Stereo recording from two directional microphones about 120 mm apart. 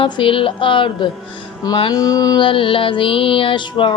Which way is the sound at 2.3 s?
45° left (ahead or behind).